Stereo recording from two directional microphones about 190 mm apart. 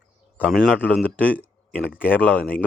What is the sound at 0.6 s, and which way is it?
Speech, 5° right (ahead or behind).